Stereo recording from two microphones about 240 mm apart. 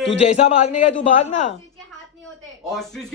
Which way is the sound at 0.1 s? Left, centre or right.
Left.